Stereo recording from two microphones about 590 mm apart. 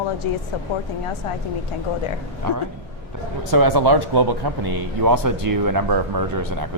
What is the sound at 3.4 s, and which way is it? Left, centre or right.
Speech, right.